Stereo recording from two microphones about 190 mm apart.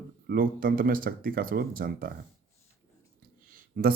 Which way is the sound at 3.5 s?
50° right (ahead or behind).